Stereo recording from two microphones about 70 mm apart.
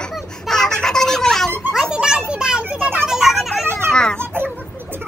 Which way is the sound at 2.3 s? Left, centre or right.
Centre.